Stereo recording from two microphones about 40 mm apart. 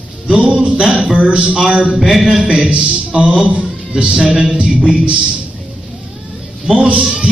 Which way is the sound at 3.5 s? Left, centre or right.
Right.